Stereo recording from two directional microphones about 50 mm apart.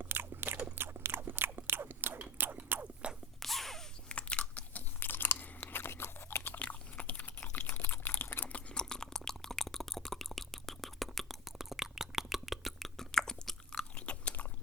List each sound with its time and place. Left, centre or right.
0.0 s a sound: right
0.8 s chewing: right
2.6 s chewing: right
3.4 s sneeze: centre
4.1 s crunch: left
4.9 s chewing: left
6.6 s a sound: left
8.4 s a sound: left; by 12.9 s centre
13.0 s chewing: centre
13.9 s biting: left